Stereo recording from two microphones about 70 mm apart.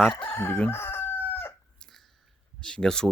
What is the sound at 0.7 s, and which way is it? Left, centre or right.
Chicken, left.